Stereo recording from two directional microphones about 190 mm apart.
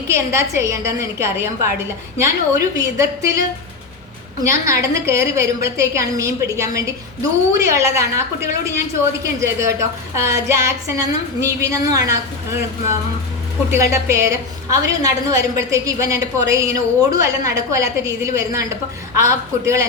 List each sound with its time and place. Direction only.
0.1 s a woman's voice: 15° right (ahead or behind)
4.4 s a woman's voice: 15° right (ahead or behind)
10.2 s a woman's voice: 15° right (ahead or behind)